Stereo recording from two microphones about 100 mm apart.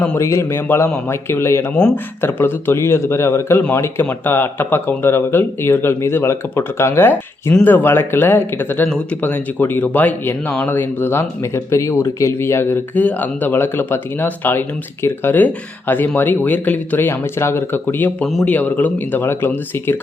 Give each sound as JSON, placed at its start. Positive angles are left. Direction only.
{"t": 0.2, "sound": "speech", "side_deg": 25}